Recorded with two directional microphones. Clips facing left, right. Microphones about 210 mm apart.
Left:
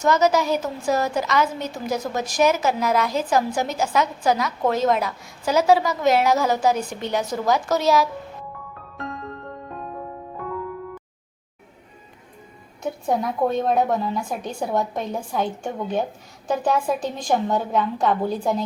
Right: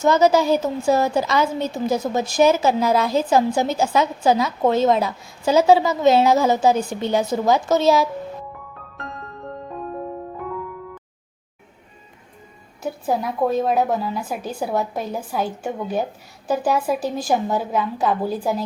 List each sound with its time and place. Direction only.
0.0 s a woman's voice: 30° right (ahead or behind)
12.8 s a woman's voice: centre (ahead or behind)